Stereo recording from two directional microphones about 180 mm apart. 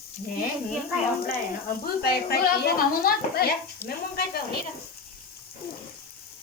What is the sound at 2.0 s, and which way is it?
A woman's voice, 60° left (ahead or behind).